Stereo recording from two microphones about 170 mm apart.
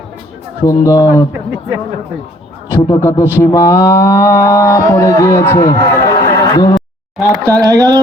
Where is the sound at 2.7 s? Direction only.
15° left (ahead or behind).